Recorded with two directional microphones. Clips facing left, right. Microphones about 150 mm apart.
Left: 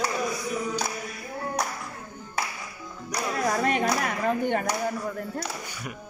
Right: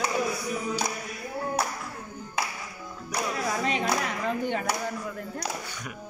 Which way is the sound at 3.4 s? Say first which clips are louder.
Left 5 dB; 55° left (ahead or behind).